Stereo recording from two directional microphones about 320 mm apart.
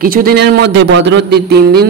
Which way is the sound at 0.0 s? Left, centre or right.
Right.